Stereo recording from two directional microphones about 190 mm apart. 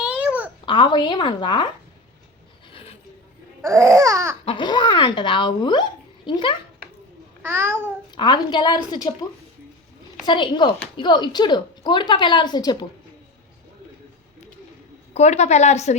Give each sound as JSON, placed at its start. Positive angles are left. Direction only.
{"t": 0.0, "sound": "babbling", "side_deg": -5}
{"t": 0.6, "sound": "speech", "side_deg": 25}
{"t": 2.7, "sound": "a sound", "side_deg": 30}
{"t": 3.6, "sound": "babbling", "side_deg": -15}
{"t": 4.4, "sound": "speech", "side_deg": 25}
{"t": 7.4, "sound": "babbling", "side_deg": -10}
{"t": 8.1, "sound": "speech", "side_deg": 25}
{"t": 10.2, "sound": "speech", "side_deg": 25}
{"t": 15.1, "sound": "a woman's voice", "side_deg": 35}